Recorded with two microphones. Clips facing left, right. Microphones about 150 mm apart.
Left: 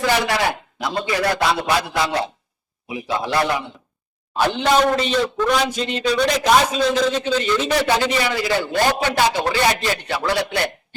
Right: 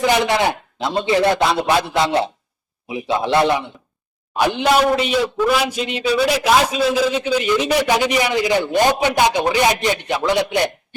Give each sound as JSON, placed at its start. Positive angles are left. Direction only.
{"t": 0.0, "sound": "a man's voice", "side_deg": -20}